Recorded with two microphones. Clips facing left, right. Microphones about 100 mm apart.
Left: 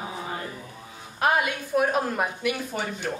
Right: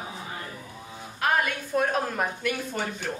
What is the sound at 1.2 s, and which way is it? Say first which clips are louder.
Speech: left 2 dB; 15° left (ahead or behind).